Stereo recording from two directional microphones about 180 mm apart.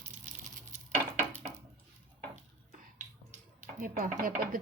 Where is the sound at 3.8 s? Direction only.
50° right (ahead or behind).